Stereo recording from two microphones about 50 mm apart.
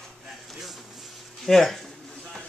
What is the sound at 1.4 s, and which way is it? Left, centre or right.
Speech, centre.